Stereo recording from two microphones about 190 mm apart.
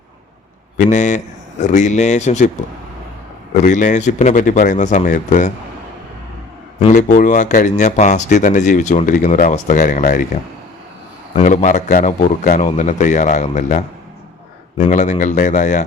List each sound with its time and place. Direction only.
0.8 s speech: 40° left (ahead or behind)
3.5 s speech: 40° left (ahead or behind)
6.7 s speech: 40° left (ahead or behind)
11.3 s speech: 40° left (ahead or behind)